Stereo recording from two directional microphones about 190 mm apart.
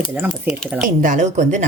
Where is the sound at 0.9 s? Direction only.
40° right (ahead or behind).